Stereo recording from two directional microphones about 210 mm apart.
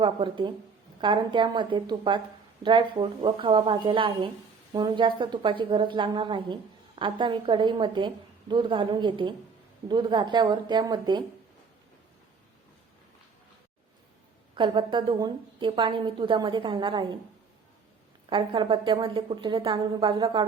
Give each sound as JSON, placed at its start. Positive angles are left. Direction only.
{"t": 0.0, "sound": "a woman's voice", "side_deg": -25}
{"t": 14.5, "sound": "a woman's voice", "side_deg": -20}
{"t": 18.3, "sound": "a woman's voice", "side_deg": -25}